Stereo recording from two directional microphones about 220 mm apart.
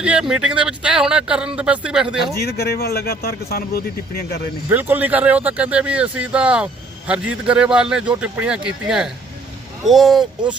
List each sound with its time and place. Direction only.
0.0 s speech: 5° right (ahead or behind)
2.4 s a man's voice: 45° left (ahead or behind)
4.7 s a man's voice: 10° right (ahead or behind)